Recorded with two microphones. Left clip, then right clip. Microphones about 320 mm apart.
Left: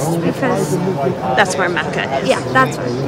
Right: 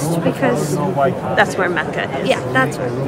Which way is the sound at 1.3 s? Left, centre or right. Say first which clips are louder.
Left 1 dB; centre.